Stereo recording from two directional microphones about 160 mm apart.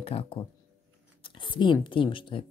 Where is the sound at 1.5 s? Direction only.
30° left (ahead or behind).